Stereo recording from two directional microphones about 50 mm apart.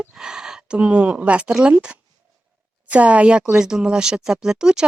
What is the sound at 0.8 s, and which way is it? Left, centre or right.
Speech, right.